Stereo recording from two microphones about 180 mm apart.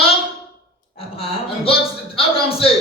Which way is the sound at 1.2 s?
30° left (ahead or behind).